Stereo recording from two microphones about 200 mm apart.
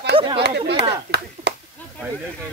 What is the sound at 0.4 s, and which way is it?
Speech, 60° right (ahead or behind).